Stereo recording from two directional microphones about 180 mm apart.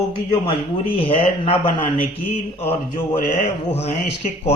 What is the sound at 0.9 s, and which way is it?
Speech, 30° left (ahead or behind).